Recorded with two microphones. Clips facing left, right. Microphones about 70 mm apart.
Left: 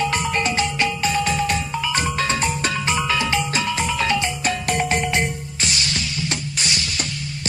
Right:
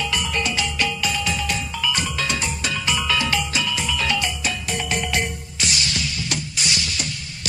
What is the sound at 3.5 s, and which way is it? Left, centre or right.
Music, left.